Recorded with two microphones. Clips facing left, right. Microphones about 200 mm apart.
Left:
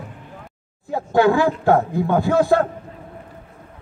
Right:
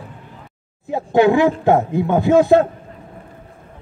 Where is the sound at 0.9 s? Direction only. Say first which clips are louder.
Right 2 dB; 20° right (ahead or behind).